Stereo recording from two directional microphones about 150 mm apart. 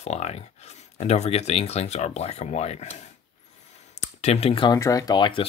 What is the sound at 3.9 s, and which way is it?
Speech, 45° left (ahead or behind).